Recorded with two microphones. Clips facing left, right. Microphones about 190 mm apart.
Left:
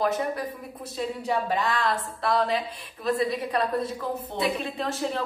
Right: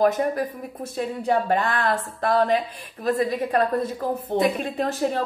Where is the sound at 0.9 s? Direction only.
55° right (ahead or behind).